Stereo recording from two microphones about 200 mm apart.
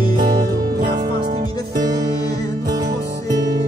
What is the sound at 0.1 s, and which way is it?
Music, 45° right (ahead or behind).